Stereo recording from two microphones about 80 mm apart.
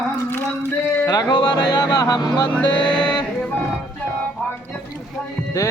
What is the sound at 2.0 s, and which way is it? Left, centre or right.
Speech, left.